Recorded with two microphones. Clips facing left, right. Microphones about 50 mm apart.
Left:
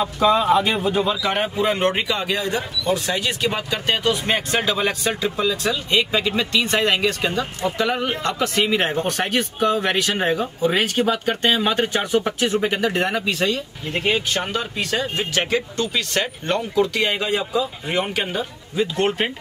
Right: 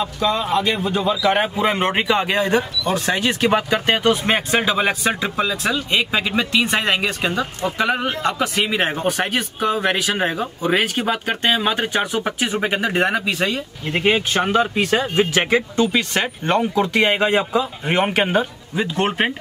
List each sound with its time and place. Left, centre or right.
0.2 s speech: centre
1.3 s speech: right
4.5 s a man's voice: centre; by 18.4 s right
18.8 s speech: centre